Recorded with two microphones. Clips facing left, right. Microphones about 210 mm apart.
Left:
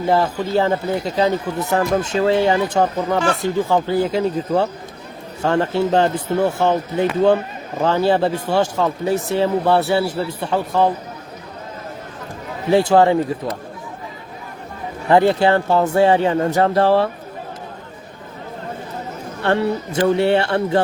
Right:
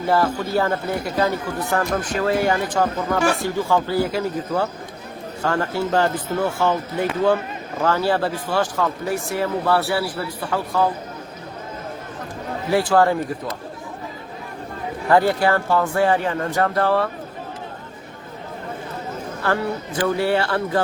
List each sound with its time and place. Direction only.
0.1 s speech: 20° left (ahead or behind)
12.7 s speech: 20° left (ahead or behind)
15.1 s speech: 25° left (ahead or behind)
19.4 s speech: 25° left (ahead or behind)